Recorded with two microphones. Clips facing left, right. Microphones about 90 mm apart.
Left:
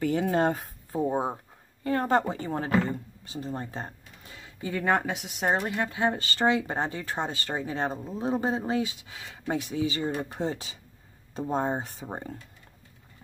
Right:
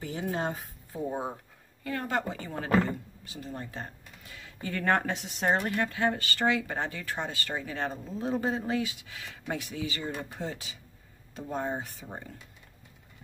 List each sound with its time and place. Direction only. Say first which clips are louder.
0.0 s speech: left 8 dB; 65° left (ahead or behind)
0.9 s speech: left 6 dB; 30° left (ahead or behind); by 5.7 s 5° left (ahead or behind)
5.7 s speech: left 1 dB; 20° left (ahead or behind)